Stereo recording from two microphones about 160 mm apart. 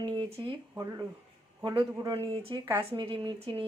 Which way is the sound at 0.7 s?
20° right (ahead or behind).